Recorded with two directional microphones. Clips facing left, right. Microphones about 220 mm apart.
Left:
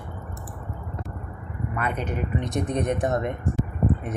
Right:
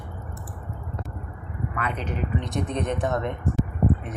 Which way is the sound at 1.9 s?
50° left (ahead or behind).